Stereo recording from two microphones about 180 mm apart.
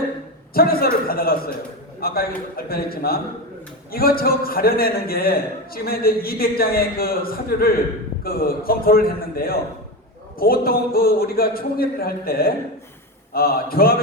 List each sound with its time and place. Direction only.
0.5 s a man's voice: 55° left (ahead or behind)